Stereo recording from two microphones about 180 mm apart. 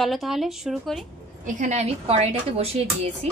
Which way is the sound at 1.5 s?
40° right (ahead or behind).